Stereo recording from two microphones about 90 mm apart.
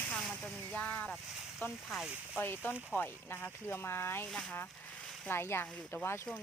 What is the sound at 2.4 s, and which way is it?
Speech, 25° left (ahead or behind).